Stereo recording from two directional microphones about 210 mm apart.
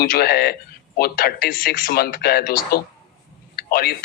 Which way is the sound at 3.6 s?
45° left (ahead or behind).